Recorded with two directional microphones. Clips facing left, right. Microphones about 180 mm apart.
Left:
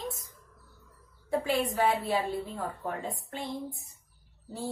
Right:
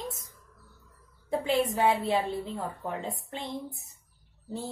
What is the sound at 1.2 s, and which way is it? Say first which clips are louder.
Speech: right 2 dB; 20° right (ahead or behind).